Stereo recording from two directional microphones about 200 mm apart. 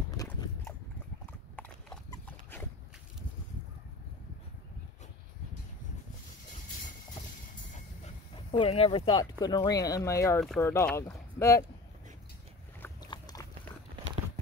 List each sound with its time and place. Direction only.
0.1 s biting: 20° left (ahead or behind)
1.2 s clip-clop: 10° left (ahead or behind)
8.0 s dog: 30° left (ahead or behind)
9.4 s speech: 20° left (ahead or behind)
12.8 s boat: 20° left (ahead or behind)